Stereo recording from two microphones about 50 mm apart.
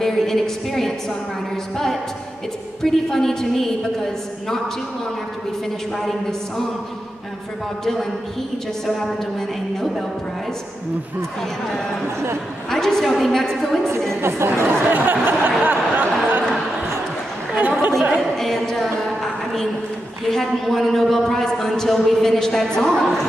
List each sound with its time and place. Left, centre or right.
0.0 s a woman's voice: centre
2.8 s a man's voice: centre
5.9 s a woman's voice: centre
7.8 s a man's voice: centre
12.7 s a man's voice: centre
14.2 s speech: right
15.0 s a sound: right
17.6 s a sound: right
18.4 s a woman's voice: centre